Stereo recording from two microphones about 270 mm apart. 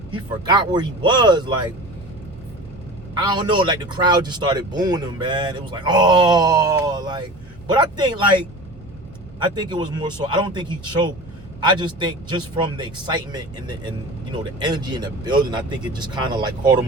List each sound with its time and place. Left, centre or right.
0.1 s speech: centre
3.2 s speech: centre
9.4 s speech: centre